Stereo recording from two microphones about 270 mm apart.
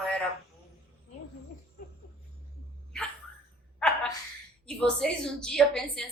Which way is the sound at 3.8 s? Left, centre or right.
Centre.